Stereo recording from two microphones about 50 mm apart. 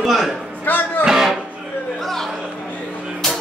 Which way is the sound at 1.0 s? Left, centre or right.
Centre.